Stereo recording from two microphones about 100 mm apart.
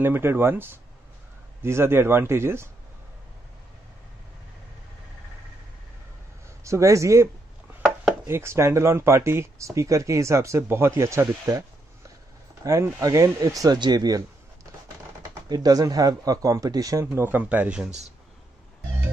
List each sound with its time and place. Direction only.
0.0 s speech: 20° right (ahead or behind)
6.6 s speech: 30° right (ahead or behind)
8.3 s speech: 25° right (ahead or behind)
12.6 s speech: 30° right (ahead or behind)
15.4 s speech: 40° right (ahead or behind)
17.0 s speech: 25° right (ahead or behind)